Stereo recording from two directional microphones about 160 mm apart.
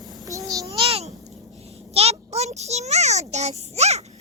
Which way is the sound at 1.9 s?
40° right (ahead or behind).